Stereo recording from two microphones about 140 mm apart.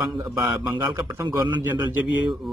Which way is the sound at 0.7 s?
20° right (ahead or behind).